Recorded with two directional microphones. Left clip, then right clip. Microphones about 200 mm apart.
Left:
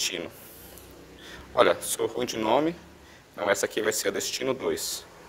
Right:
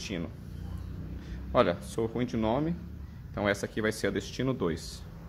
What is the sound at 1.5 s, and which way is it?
Speech, 35° left (ahead or behind).